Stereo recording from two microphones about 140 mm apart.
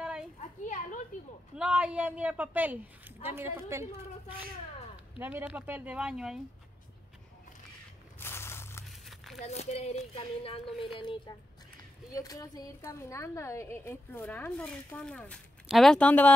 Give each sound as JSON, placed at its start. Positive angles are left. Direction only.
{"t": 0.4, "sound": "children playing", "side_deg": 65}
{"t": 1.6, "sound": "a woman's voice", "side_deg": -10}
{"t": 5.1, "sound": "a woman's voice", "side_deg": -10}
{"t": 8.2, "sound": "a sound", "side_deg": 15}
{"t": 8.8, "sound": "a sound", "side_deg": 0}
{"t": 9.4, "sound": "speech", "side_deg": 50}
{"t": 12.2, "sound": "a woman's voice", "side_deg": 25}